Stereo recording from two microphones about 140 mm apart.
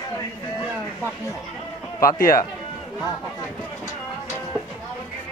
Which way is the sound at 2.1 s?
80° left.